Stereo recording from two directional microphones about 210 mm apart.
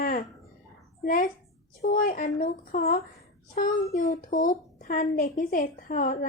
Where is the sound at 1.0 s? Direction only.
40° left (ahead or behind).